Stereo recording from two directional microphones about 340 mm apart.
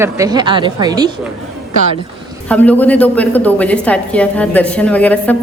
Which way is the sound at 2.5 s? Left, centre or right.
Centre.